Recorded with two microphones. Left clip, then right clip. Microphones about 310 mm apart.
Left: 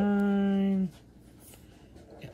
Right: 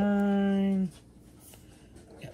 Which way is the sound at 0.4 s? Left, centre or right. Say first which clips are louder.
Right 1 dB; centre.